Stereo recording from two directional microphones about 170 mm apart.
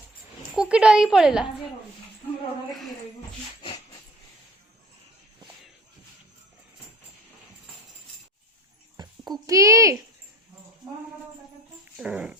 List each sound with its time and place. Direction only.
0.5 s a woman's voice: 5° right (ahead or behind)
9.0 s babbling: 25° right (ahead or behind)
9.5 s a child's voice: 20° right (ahead or behind)
11.9 s a woman's voice: 5° right (ahead or behind)